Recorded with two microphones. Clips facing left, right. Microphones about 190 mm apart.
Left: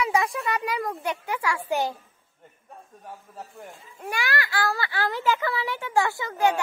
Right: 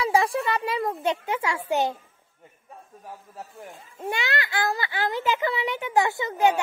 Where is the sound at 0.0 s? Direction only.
30° right (ahead or behind).